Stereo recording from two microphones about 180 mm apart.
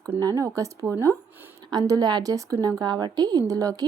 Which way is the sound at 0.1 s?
20° right (ahead or behind).